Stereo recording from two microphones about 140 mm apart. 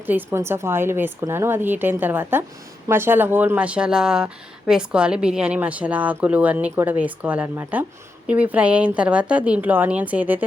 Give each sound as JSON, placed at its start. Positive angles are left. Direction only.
{"t": 0.0, "sound": "speech", "side_deg": -15}